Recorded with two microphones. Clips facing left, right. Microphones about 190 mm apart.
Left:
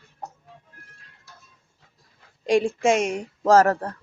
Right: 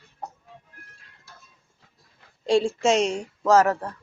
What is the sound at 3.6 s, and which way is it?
Speech, 40° left (ahead or behind).